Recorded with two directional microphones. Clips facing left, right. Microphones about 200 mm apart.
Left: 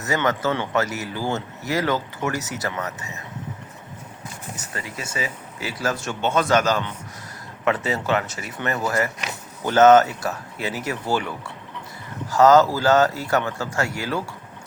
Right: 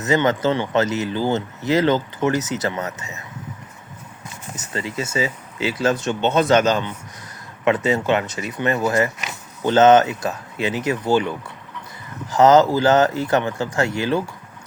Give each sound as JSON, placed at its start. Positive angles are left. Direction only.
{"t": 0.0, "sound": "speech", "side_deg": -20}
{"t": 4.5, "sound": "speech", "side_deg": -25}